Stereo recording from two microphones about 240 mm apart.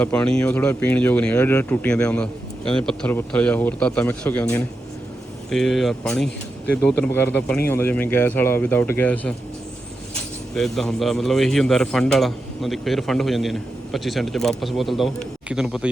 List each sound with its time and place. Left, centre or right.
0.0 s a man's voice: centre
10.5 s a man's voice: centre